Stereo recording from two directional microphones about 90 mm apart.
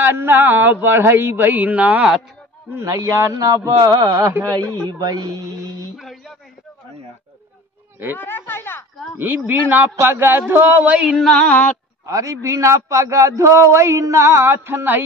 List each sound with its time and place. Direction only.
0.0 s speech: 25° right (ahead or behind)
2.7 s a man's voice: 35° right (ahead or behind)
4.8 s speech: 45° right (ahead or behind)
5.9 s a man's voice: centre (ahead or behind)
8.2 s speech: 25° left (ahead or behind)
9.5 s speech: 20° right (ahead or behind)
11.2 s a sound: 10° left (ahead or behind)
12.1 s a man's voice: 35° right (ahead or behind)